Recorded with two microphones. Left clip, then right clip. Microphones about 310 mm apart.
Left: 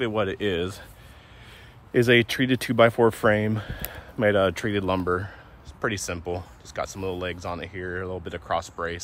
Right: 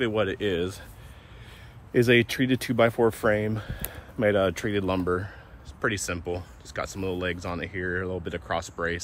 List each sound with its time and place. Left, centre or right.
0.0 s speech: centre
1.9 s speech: left